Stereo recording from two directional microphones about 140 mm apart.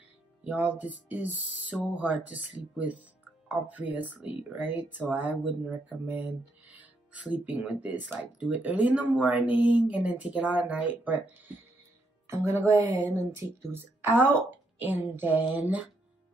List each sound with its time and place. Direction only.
0.4 s speech: 10° right (ahead or behind)